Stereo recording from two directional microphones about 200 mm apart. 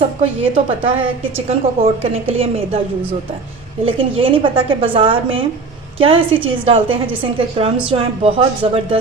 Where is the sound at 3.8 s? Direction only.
30° right (ahead or behind).